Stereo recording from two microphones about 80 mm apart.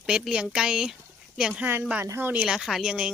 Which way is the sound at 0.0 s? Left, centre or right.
Centre.